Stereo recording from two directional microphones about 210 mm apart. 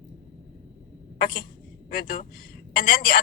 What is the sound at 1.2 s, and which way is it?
A woman's voice, 45° left (ahead or behind).